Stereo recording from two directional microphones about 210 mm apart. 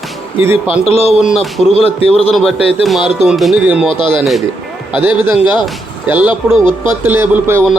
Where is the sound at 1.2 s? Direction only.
Centre (ahead or behind).